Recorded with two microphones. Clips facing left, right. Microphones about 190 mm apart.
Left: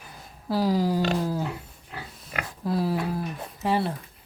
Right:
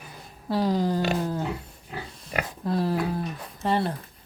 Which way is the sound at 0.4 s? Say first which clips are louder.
Even; 5° left (ahead or behind).